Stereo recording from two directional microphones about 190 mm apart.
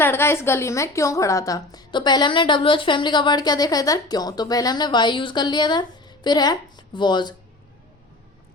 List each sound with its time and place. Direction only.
0.0 s a woman's voice: 10° left (ahead or behind)